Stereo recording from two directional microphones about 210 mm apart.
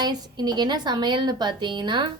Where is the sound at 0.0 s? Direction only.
20° right (ahead or behind).